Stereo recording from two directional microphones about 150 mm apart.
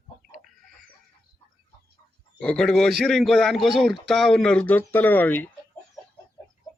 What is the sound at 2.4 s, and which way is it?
A man's voice, 5° left (ahead or behind).